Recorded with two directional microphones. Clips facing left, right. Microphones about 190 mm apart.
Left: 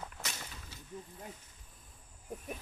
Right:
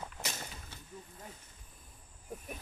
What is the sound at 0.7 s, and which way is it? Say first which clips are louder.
Vehicle: even; 55° right (ahead or behind).